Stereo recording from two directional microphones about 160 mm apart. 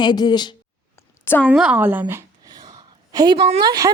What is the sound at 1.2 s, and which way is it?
Speech, 15° left (ahead or behind).